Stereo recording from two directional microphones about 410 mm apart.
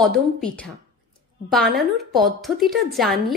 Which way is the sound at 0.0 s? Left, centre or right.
Centre.